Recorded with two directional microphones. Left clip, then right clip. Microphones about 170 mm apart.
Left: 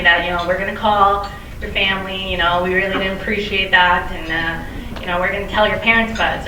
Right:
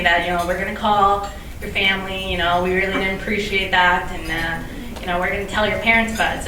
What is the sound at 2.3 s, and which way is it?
A woman's voice, 15° right (ahead or behind).